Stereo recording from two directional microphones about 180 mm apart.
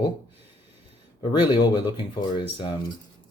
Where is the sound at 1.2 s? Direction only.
25° left (ahead or behind).